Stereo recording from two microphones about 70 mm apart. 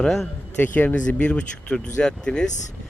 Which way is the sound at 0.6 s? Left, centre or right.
Left.